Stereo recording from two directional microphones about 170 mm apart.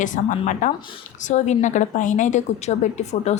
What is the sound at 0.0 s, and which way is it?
A woman's voice, 50° left (ahead or behind).